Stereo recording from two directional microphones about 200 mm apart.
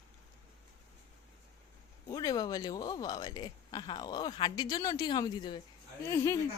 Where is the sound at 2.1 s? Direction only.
20° left (ahead or behind).